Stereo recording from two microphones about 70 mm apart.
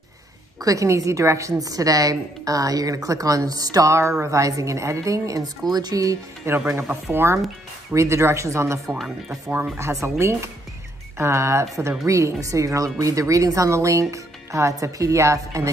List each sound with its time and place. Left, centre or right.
0.6 s a woman's voice: right
4.2 s speech: right
6.5 s speech: right
8.8 s speech: centre
10.0 s speech: right